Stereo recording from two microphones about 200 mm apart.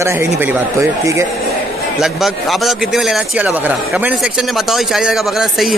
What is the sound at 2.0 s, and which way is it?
A man's voice, centre (ahead or behind).